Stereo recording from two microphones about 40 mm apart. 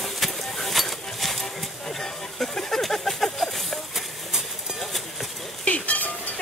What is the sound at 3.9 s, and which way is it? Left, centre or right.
Clip-clop, centre.